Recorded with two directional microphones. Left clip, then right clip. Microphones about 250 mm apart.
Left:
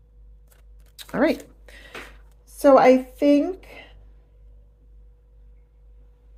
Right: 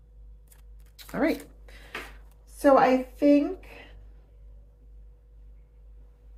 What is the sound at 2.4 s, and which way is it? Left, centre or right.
A woman's voice, left.